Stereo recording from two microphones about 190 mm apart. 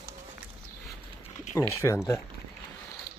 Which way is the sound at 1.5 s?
15° left (ahead or behind).